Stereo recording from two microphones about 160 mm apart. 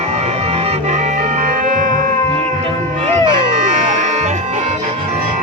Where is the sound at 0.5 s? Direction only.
40° right (ahead or behind); by 1.9 s 60° right (ahead or behind).